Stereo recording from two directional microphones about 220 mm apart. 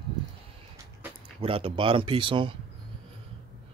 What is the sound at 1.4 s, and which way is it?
Speech, 25° right (ahead or behind).